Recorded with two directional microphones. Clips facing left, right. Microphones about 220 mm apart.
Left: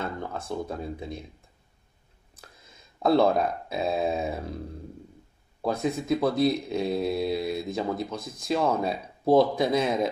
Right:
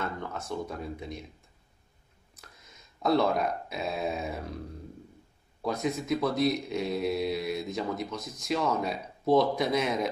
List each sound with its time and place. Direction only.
0.0 s speech: 30° left (ahead or behind)
3.0 s speech: 30° left (ahead or behind)
5.7 s speech: 30° left (ahead or behind)